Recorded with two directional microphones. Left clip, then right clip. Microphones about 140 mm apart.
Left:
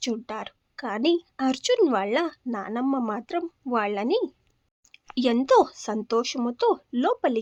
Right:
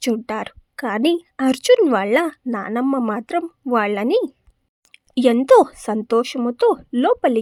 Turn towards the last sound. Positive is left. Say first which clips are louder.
# right 7 dB
turn(degrees=-25)  # may be behind; listen again after turning